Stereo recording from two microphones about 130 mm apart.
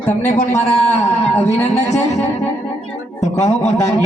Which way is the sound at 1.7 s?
60° left (ahead or behind).